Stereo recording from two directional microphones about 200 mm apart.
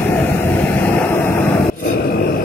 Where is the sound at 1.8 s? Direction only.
50° left (ahead or behind).